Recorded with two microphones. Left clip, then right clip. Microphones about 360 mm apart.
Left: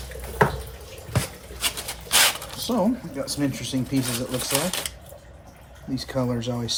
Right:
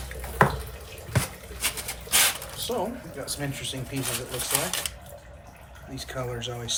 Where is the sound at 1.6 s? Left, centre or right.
Centre.